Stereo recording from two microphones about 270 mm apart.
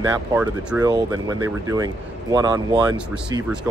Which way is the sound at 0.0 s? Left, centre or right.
Centre.